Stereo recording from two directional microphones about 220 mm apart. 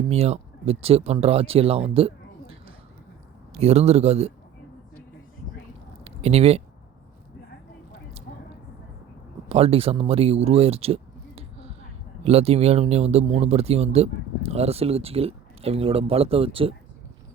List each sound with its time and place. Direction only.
0.1 s speech: 30° right (ahead or behind)
6.1 s speech: 30° right (ahead or behind)
9.5 s speech: 25° right (ahead or behind)